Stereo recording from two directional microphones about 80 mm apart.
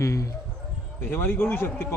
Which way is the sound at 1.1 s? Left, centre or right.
Left.